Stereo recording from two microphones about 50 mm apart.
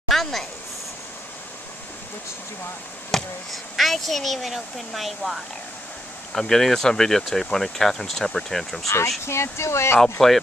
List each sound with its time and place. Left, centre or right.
0.1 s a sound: centre
3.1 s speech: centre
8.8 s speech: left
9.2 s speech: left
10.2 s speech: centre